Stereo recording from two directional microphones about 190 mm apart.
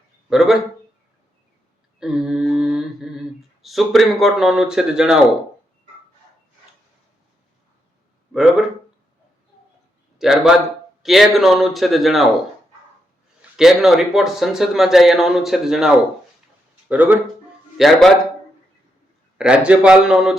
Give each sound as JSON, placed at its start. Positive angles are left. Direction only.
{"t": 0.3, "sound": "speech", "side_deg": 0}
{"t": 2.0, "sound": "mantra", "side_deg": -5}
{"t": 3.6, "sound": "speech", "side_deg": 0}
{"t": 8.3, "sound": "a man's voice", "side_deg": -5}
{"t": 10.2, "sound": "speech", "side_deg": 0}
{"t": 13.6, "sound": "speech", "side_deg": 0}
{"t": 16.9, "sound": "speech", "side_deg": -10}
{"t": 19.4, "sound": "speech", "side_deg": -5}